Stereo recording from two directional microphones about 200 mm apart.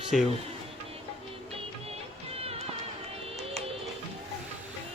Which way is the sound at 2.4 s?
30° right (ahead or behind).